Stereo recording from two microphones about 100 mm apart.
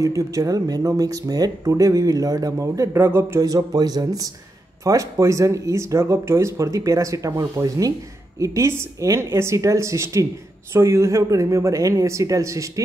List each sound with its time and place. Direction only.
0.0 s speech: 35° right (ahead or behind)
3.4 s a woman's voice: 40° right (ahead or behind)